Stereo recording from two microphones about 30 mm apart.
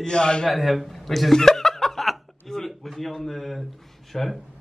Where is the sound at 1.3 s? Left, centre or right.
Centre.